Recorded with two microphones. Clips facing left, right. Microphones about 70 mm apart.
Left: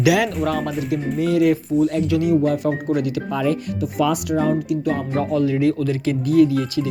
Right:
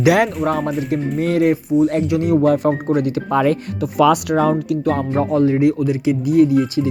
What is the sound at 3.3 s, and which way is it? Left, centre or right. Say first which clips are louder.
Speech: right 6 dB; right.